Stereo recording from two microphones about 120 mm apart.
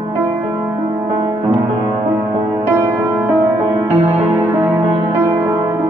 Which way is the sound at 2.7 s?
20° right (ahead or behind).